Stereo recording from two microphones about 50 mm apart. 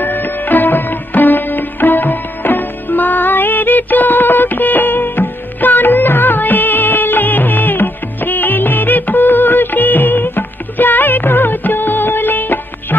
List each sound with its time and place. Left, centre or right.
0.0 s music: left